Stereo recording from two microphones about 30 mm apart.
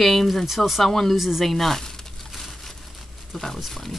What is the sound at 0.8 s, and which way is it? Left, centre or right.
Speech, centre.